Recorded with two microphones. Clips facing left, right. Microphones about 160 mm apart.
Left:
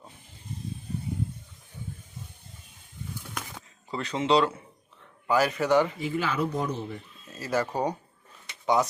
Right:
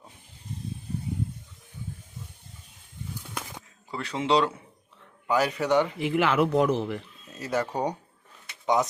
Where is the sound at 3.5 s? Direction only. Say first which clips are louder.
Left 2 dB; 10° right (ahead or behind).